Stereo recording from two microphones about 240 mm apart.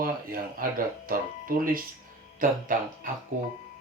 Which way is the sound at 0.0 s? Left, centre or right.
Right.